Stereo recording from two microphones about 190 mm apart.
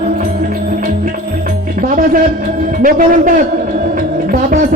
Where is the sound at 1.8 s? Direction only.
45° right (ahead or behind).